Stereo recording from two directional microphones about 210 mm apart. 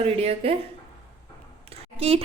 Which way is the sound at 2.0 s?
30° right (ahead or behind).